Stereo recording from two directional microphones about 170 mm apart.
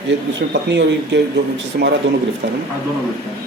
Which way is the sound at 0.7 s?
90° right.